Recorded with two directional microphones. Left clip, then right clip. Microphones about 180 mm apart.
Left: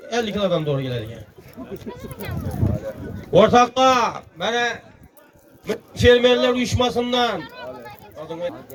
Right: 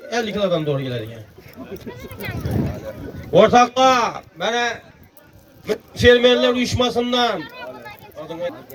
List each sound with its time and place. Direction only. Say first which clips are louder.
0.1 s a man's voice: right 1 dB; 35° right (ahead or behind)
3.3 s a man's voice: right 1 dB; 30° right (ahead or behind)
7.4 s a sound: right 1 dB; 15° left (ahead or behind)
8.3 s a man's voice: right 1 dB; 35° right (ahead or behind)